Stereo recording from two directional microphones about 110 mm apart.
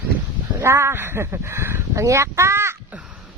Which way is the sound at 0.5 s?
25° right (ahead or behind).